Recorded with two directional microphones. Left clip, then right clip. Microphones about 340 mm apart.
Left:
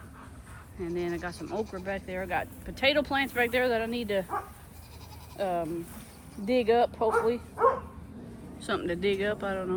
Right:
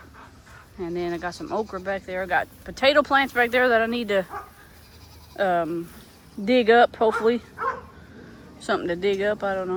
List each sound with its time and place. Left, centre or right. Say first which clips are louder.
0.8 s speech: right 5 dB; centre
5.4 s speech: right 8 dB; right
8.5 s speech: right 6 dB; centre